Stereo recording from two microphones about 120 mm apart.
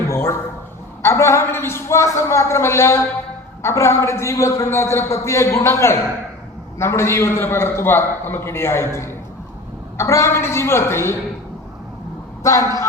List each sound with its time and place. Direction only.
0.1 s a man's voice: 25° left (ahead or behind)
12.4 s a woman's voice: 25° left (ahead or behind)